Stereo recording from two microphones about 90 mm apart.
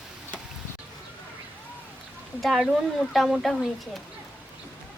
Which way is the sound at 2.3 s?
Centre (ahead or behind).